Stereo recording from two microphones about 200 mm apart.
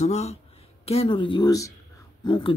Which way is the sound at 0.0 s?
35° left (ahead or behind).